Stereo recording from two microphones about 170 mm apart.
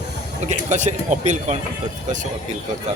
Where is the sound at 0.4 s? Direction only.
45° right (ahead or behind).